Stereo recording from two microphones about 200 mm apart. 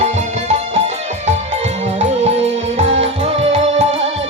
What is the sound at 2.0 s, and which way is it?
Music, 35° right (ahead or behind).